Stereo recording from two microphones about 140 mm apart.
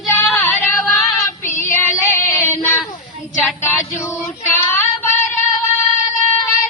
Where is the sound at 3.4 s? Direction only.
15° left (ahead or behind).